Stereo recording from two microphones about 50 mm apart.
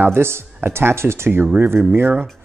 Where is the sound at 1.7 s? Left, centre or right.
Right.